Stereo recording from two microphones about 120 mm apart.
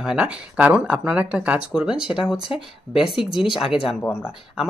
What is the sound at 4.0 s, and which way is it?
Speech, 20° left (ahead or behind).